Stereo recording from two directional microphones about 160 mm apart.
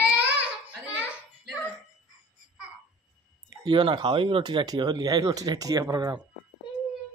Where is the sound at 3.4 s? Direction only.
25° right (ahead or behind).